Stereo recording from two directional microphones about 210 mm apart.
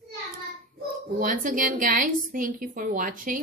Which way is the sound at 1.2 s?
40° right (ahead or behind).